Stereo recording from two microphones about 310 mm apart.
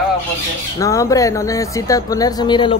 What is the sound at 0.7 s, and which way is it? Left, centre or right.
Speech, centre.